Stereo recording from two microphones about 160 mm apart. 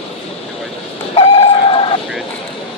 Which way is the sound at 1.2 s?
35° left (ahead or behind).